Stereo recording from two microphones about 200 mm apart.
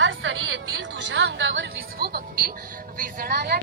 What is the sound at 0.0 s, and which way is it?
Music, 75° right (ahead or behind).